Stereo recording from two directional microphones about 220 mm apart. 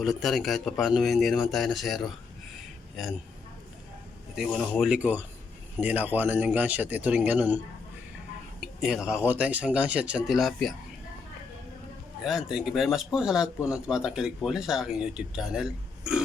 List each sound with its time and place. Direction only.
0.0 s a man's voice: centre (ahead or behind)
4.4 s a man's voice: 5° left (ahead or behind)
8.6 s speech: centre (ahead or behind)
12.2 s speech: centre (ahead or behind)